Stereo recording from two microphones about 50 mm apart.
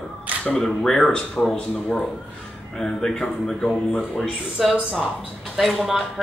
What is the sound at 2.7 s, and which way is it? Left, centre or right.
A woman's voice, centre.